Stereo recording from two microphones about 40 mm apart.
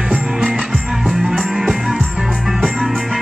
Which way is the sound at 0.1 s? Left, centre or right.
Centre.